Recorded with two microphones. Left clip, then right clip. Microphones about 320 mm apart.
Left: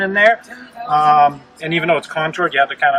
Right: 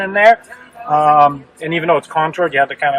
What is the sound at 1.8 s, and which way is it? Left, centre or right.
Speech, centre.